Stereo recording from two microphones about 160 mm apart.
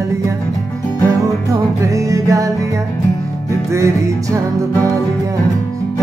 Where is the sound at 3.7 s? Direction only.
20° right (ahead or behind).